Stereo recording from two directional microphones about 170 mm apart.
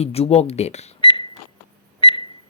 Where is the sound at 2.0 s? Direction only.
30° left (ahead or behind).